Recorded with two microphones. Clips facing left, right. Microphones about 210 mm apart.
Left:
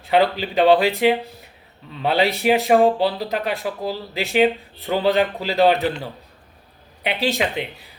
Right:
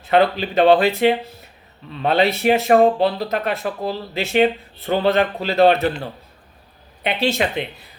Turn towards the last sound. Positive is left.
turn(degrees=15)  # may be behind; listen again after turning